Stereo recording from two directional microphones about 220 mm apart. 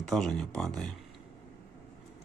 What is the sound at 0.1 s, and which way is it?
Speech, centre (ahead or behind).